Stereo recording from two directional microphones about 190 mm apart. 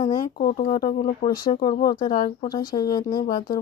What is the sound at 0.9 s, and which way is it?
Speech, 40° left (ahead or behind).